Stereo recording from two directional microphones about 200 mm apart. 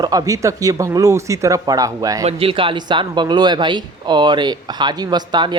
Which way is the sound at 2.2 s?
25° right (ahead or behind).